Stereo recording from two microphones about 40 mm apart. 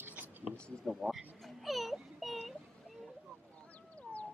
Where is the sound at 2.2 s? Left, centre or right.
Centre.